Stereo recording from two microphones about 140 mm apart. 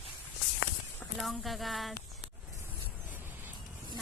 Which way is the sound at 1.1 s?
Centre (ahead or behind).